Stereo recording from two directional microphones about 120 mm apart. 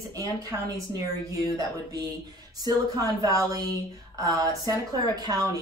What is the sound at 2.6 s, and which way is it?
A woman's voice, 30° right (ahead or behind).